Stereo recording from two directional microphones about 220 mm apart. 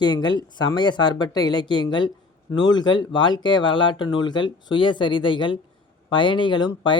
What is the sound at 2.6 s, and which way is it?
A man's voice, 20° left (ahead or behind).